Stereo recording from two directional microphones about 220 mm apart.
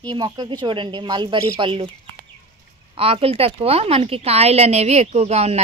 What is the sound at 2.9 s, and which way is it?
Speech, 25° right (ahead or behind).